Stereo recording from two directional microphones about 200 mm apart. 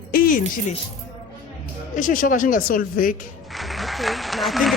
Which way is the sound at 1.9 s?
40° left (ahead or behind).